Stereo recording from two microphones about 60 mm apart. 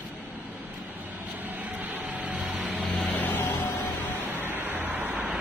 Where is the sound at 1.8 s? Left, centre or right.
Right.